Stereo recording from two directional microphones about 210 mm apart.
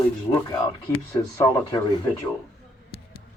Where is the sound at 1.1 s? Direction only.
15° left (ahead or behind).